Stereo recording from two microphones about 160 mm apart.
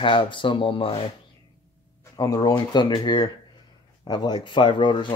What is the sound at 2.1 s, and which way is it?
Speech, 25° left (ahead or behind).